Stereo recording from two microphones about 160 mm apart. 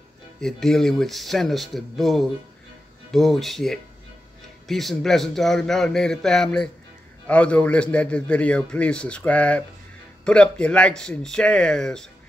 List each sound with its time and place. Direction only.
0.4 s a man's voice: 5° left (ahead or behind)